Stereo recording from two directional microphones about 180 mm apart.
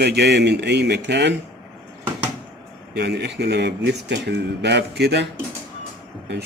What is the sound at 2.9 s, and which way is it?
Speech, 65° right (ahead or behind).